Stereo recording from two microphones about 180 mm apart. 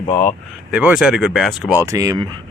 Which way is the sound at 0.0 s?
35° left (ahead or behind).